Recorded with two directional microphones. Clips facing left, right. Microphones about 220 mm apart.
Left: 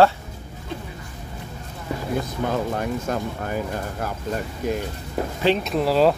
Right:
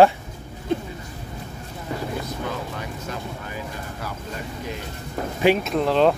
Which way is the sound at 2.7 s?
50° left (ahead or behind).